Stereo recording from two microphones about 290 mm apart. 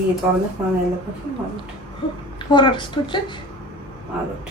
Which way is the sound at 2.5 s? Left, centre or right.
Centre.